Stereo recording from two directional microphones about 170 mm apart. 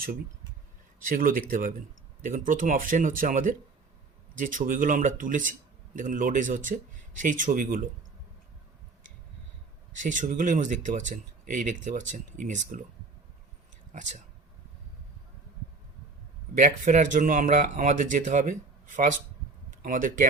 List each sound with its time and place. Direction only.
1.0 s speech: 55° right (ahead or behind)
9.9 s speech: 50° right (ahead or behind)
16.6 s speech: 45° right (ahead or behind)